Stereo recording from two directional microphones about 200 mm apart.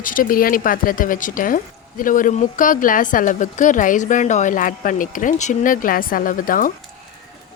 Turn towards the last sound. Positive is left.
turn(degrees=45)  # may be behind; listen again after turning